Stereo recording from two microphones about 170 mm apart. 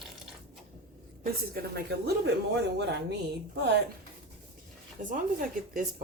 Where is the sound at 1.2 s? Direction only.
60° right (ahead or behind).